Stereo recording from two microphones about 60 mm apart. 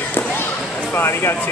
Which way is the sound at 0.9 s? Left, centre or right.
Left.